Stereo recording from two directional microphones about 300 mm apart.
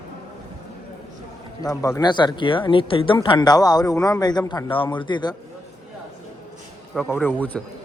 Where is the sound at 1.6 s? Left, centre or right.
Centre.